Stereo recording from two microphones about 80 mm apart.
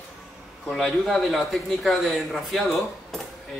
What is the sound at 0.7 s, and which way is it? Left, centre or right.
A man's voice, centre.